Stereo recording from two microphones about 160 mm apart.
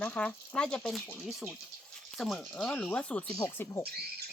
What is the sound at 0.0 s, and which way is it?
Speech, 10° left (ahead or behind).